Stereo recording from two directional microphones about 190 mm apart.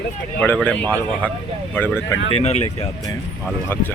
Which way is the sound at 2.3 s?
30° left (ahead or behind).